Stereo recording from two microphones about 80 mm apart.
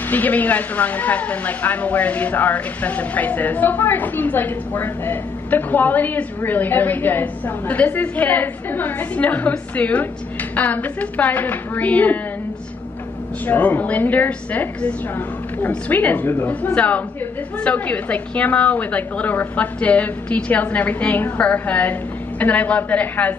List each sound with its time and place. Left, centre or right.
0.1 s a woman's voice: left
13.5 s a woman's voice: left